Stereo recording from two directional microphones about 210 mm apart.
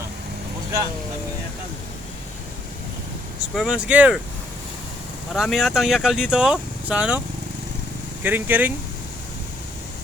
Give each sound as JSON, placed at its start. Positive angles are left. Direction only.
{"t": 3.5, "sound": "speech", "side_deg": 0}
{"t": 5.3, "sound": "speech", "side_deg": 0}
{"t": 8.2, "sound": "speech", "side_deg": -10}